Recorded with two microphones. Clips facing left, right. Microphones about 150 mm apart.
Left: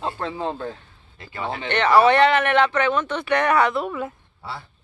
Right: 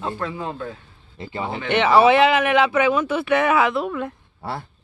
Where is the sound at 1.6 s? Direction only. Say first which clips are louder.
Right 1 dB; 5° right (ahead or behind).